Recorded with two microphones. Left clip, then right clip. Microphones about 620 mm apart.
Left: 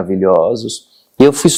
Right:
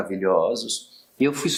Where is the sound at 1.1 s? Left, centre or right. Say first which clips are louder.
Left 14 dB; left.